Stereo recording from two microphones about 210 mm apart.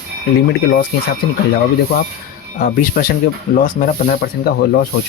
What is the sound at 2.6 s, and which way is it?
Speech, 45° left (ahead or behind).